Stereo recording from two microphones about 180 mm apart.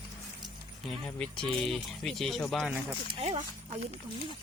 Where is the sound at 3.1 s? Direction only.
35° right (ahead or behind).